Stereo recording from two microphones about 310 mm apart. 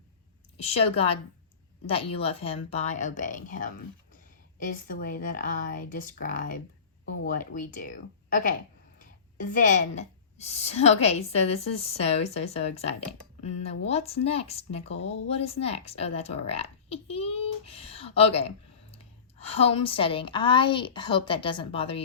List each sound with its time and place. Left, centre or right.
0.5 s a woman's voice: centre